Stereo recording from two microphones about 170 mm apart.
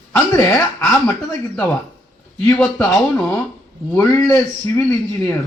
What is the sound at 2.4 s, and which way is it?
Speech, 10° left (ahead or behind).